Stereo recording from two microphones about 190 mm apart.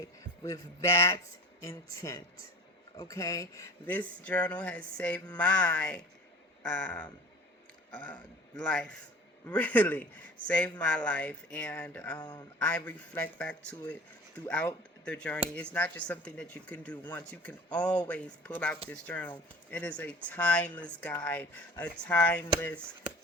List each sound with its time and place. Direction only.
0.4 s speech: 15° left (ahead or behind)
12.2 s a man's voice: 20° left (ahead or behind)
12.5 s speech: 5° left (ahead or behind)